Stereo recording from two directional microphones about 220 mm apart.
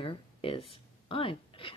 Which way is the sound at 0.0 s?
25° left (ahead or behind).